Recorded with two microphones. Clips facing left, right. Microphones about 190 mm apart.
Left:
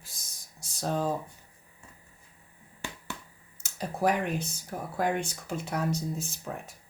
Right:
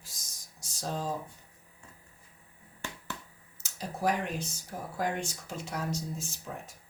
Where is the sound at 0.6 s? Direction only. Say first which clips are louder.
Left 5 dB; 60° left (ahead or behind).